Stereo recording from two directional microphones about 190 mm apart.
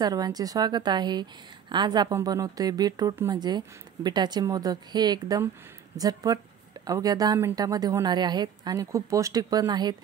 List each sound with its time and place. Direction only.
0.0 s a woman's voice: 20° right (ahead or behind)